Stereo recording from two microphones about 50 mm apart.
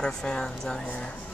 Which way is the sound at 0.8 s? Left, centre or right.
Left.